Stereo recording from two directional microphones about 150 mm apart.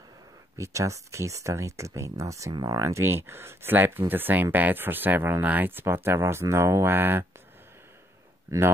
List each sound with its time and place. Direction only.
0.6 s speech: 20° right (ahead or behind)
8.5 s speech: 15° right (ahead or behind)